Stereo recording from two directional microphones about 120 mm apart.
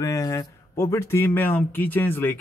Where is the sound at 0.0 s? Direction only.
30° left (ahead or behind).